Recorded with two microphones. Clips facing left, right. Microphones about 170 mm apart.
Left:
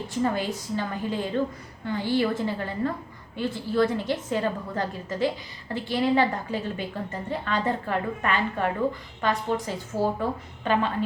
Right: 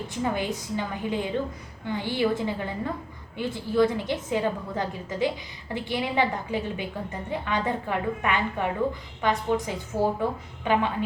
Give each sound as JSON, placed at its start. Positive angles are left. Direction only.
{"t": 0.1, "sound": "a woman's voice", "side_deg": -15}